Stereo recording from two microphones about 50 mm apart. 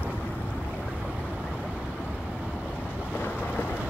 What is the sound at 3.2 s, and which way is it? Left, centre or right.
Thunder, left.